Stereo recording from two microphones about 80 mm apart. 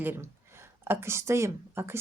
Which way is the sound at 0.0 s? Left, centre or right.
Right.